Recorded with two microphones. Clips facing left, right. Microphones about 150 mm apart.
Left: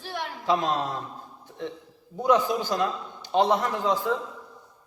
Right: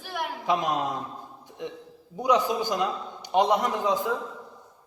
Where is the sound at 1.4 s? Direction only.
15° right (ahead or behind).